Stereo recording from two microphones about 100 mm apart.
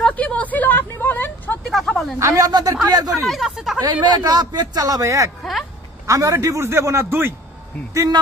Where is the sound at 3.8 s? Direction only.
50° right (ahead or behind); by 7.3 s 25° right (ahead or behind).